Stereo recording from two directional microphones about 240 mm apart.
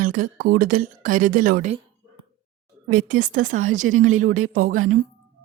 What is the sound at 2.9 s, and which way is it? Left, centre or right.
Speech, right.